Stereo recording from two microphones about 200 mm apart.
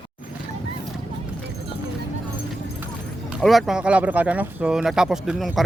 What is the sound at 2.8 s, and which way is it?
Speech, 5° right (ahead or behind).